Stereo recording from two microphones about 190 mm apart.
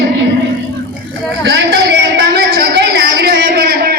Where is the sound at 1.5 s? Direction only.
60° right (ahead or behind).